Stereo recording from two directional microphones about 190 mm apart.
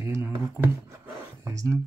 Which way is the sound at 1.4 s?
15° right (ahead or behind).